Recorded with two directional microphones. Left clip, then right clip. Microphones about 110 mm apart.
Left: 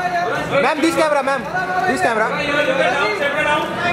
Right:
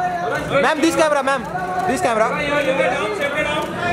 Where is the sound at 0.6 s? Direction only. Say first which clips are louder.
Even; 5° right (ahead or behind).